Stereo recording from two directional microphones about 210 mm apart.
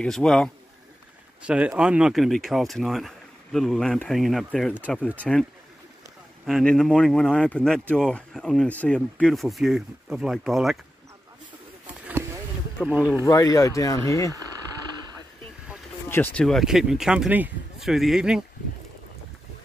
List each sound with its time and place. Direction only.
0.0 s speech: 5° left (ahead or behind)
12.8 s speech: 5° right (ahead or behind)
13.2 s speech: 15° left (ahead or behind)
16.1 s speech: 10° left (ahead or behind)